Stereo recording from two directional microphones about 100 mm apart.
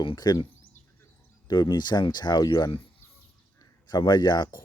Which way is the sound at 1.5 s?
45° left (ahead or behind).